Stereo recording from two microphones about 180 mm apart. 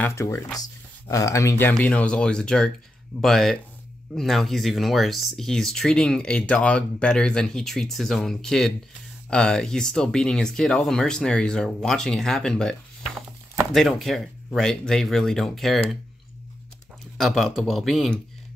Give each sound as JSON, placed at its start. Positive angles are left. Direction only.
{"t": 0.0, "sound": "speech", "side_deg": 15}
{"t": 1.7, "sound": "speech", "side_deg": 5}
{"t": 17.2, "sound": "speech", "side_deg": 0}